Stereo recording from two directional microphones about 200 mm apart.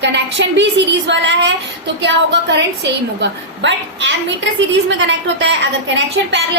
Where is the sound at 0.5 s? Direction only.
65° right (ahead or behind).